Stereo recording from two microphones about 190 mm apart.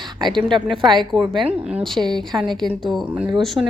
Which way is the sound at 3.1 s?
10° right (ahead or behind).